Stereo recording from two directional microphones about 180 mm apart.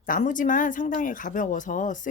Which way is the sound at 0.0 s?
45° left (ahead or behind).